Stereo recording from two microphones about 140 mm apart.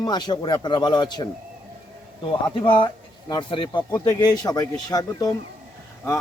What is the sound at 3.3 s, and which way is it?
Speech, 35° left (ahead or behind).